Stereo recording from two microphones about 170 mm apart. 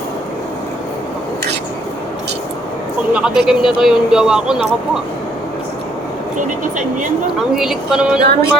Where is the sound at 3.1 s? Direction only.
5° right (ahead or behind).